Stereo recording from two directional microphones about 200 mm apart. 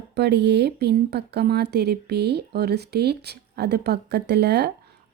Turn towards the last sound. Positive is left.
turn(degrees=-55)  # may be behind; listen again after turning